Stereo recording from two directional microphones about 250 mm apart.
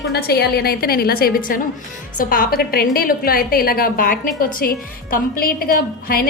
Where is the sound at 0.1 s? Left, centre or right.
Left.